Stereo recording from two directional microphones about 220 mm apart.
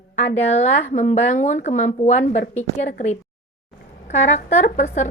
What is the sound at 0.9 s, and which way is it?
A woman's voice, 30° left (ahead or behind).